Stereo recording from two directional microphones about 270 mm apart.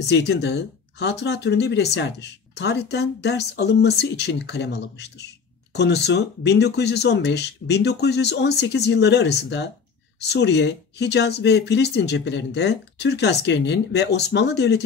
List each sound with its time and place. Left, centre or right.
0.0 s speech: left